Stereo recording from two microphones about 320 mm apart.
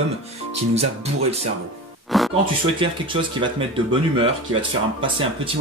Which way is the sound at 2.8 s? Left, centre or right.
Centre.